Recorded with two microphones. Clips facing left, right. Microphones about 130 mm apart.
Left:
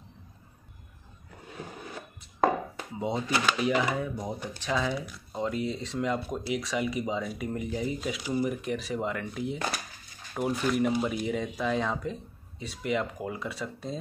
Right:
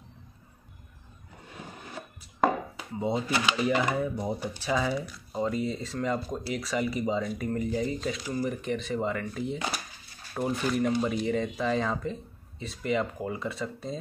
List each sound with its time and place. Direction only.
3.0 s speech: centre (ahead or behind)